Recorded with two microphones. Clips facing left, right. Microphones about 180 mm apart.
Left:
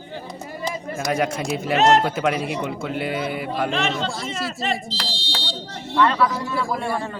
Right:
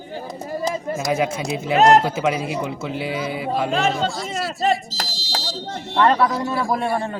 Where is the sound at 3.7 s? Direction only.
45° right (ahead or behind).